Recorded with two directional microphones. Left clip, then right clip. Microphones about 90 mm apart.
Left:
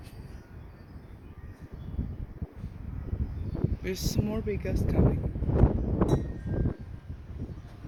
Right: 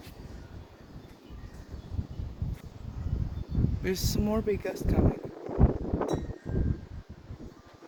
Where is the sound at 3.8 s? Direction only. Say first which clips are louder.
Right 3 dB; 65° right (ahead or behind).